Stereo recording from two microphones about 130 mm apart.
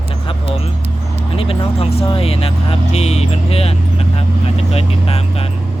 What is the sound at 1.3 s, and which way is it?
Speech, 45° left (ahead or behind).